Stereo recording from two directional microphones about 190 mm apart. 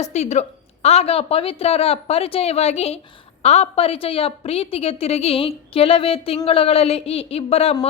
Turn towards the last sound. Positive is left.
turn(degrees=30)  # may be behind; listen again after turning